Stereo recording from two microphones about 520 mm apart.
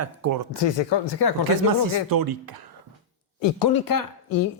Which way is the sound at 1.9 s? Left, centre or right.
Right.